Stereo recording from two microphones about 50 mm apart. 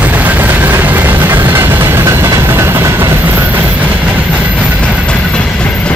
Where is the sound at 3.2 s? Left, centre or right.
Right.